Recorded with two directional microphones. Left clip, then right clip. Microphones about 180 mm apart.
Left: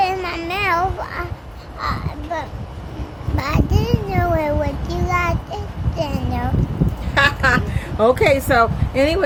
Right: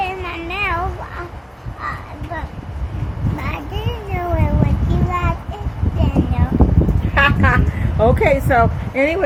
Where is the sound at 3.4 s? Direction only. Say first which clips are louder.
Left 6 dB; 25° left (ahead or behind).